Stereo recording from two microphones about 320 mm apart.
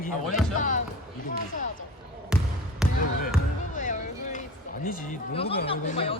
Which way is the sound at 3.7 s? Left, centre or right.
Left.